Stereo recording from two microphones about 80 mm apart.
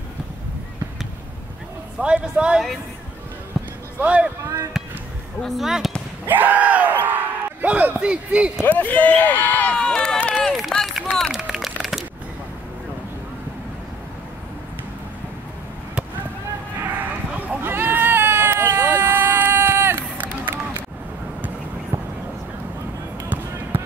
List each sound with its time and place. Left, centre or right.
2.0 s a man's voice: centre
4.0 s a man's voice: centre
5.4 s speech: centre
6.2 s bellow: right
8.1 s a man's voice: centre
8.6 s speech: left
10.4 s run: centre
11.4 s a sound: centre
17.6 s sheep: right
23.2 s basketball bounce: right